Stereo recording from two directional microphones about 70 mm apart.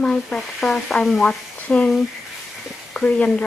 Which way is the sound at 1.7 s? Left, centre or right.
Centre.